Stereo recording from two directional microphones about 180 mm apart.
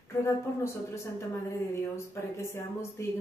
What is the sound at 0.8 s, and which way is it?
Speech, 15° left (ahead or behind).